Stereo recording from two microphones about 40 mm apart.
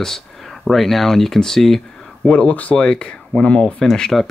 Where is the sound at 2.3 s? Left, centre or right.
Left.